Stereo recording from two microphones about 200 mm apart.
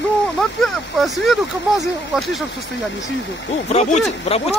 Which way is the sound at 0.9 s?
Centre (ahead or behind).